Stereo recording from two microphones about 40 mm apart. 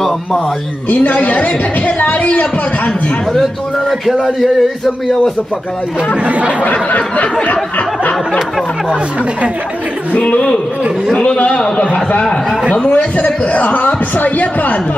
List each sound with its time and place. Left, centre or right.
0.8 s a woman's voice: left
4.0 s speech: centre
6.2 s speech: right
6.6 s speech: left
11.3 s a woman's voice: left